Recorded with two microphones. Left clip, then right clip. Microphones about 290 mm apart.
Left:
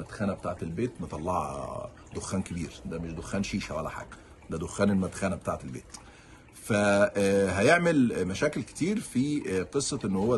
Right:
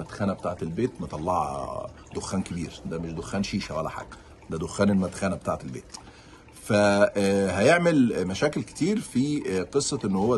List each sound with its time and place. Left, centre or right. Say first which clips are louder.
0.1 s a man's voice: right 3 dB; centre
6.7 s a man's voice: right 3 dB; centre